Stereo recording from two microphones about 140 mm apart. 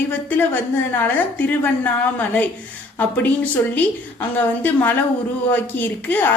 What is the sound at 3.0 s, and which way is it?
A woman's voice, 10° left (ahead or behind).